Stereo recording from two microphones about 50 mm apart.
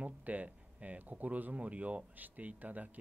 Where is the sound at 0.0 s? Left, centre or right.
Right.